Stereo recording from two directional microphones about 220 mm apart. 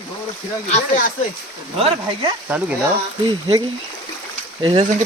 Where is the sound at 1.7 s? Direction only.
25° right (ahead or behind).